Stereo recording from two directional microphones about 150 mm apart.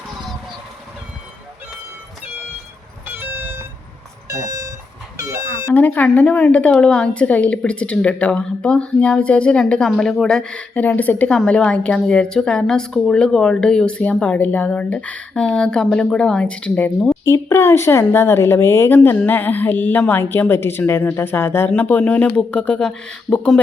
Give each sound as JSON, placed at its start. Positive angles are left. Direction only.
{"t": 3.1, "sound": "vehicle", "side_deg": -15}
{"t": 4.3, "sound": "a sound", "side_deg": -20}
{"t": 5.7, "sound": "a woman's voice", "side_deg": 10}